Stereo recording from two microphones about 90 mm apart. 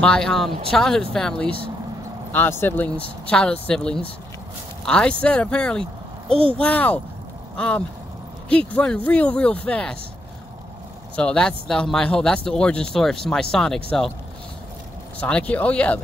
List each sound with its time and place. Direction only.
0.0 s speech: 5° left (ahead or behind)
2.3 s speech: 25° left (ahead or behind)
11.1 s speech: 10° left (ahead or behind)
15.1 s speech: 15° left (ahead or behind)